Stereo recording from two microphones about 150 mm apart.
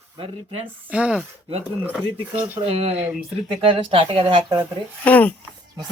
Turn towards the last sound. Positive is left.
turn(degrees=10)  # may be behind; listen again after turning